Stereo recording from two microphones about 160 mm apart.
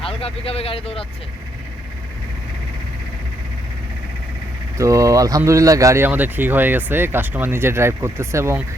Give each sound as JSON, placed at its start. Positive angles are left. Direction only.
{"t": 0.0, "sound": "speech", "side_deg": 35}
{"t": 4.8, "sound": "speech", "side_deg": -20}